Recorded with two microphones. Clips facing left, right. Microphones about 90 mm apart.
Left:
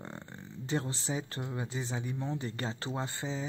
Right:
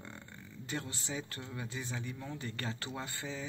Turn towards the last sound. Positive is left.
turn(degrees=25)  # may be behind; listen again after turning